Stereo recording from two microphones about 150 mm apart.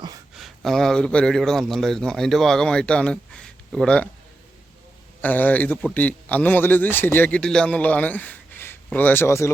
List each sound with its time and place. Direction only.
0.3 s a man's voice: centre (ahead or behind)
5.2 s a man's voice: 10° left (ahead or behind)